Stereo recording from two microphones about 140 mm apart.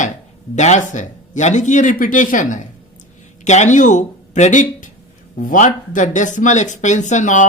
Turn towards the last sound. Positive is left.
turn(degrees=60)  # may be behind; listen again after turning